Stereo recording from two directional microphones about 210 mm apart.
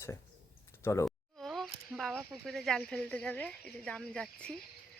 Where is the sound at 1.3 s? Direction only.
Centre (ahead or behind).